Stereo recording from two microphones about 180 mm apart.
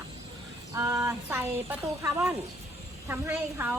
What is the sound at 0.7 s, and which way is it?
Speech, 15° right (ahead or behind).